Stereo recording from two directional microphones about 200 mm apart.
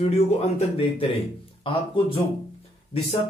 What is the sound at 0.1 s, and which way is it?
A man's voice, 30° left (ahead or behind).